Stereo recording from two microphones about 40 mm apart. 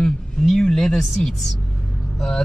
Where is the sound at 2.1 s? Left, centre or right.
Centre.